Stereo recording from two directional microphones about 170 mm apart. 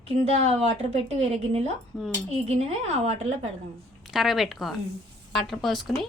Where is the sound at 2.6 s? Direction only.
35° right (ahead or behind).